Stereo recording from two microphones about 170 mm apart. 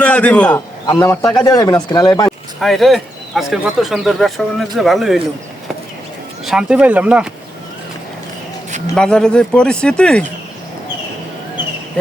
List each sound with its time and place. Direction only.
0.0 s a man's voice: 10° left (ahead or behind)
2.6 s speech: centre (ahead or behind)
6.4 s speech: 5° right (ahead or behind)
9.0 s speech: 5° left (ahead or behind)